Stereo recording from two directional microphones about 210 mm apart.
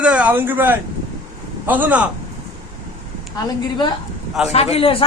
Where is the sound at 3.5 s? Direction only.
20° left (ahead or behind).